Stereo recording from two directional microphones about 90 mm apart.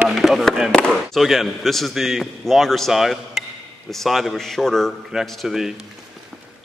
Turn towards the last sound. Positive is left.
turn(degrees=-5)  # may be behind; listen again after turning